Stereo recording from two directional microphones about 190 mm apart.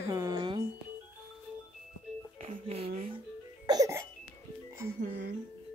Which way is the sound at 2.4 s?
35° right (ahead or behind).